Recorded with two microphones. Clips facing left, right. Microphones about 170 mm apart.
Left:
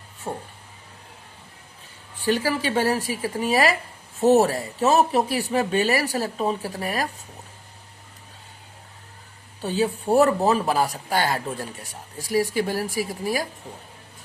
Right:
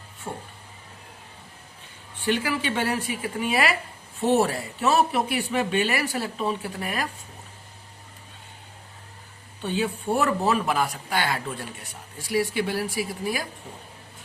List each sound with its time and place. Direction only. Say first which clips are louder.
0.3 s a sound: left 4 dB; 30° left (ahead or behind)
2.2 s speech: left 2 dB; 40° left (ahead or behind)
9.6 s speech: left 3 dB; 35° left (ahead or behind)
12.5 s speech: left 2 dB; 45° left (ahead or behind)